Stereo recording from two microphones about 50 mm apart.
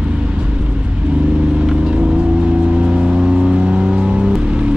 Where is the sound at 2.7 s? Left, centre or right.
Centre.